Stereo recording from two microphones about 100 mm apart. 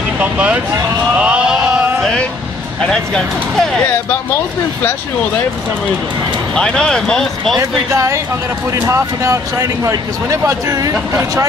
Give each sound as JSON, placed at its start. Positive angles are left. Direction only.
{"t": 0.2, "sound": "speech", "side_deg": -15}
{"t": 1.2, "sound": "a sound", "side_deg": -10}
{"t": 2.8, "sound": "speech", "side_deg": 10}
{"t": 6.5, "sound": "speech", "side_deg": 10}
{"t": 7.5, "sound": "speech", "side_deg": -30}